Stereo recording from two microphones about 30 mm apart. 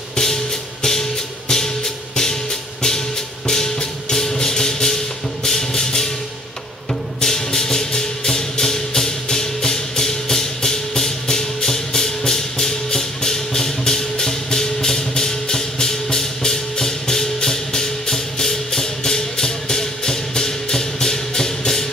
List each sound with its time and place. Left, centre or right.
0.1 s music: centre
3.4 s music: centre